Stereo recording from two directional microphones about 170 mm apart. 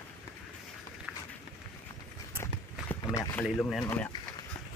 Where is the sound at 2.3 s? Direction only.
15° left (ahead or behind).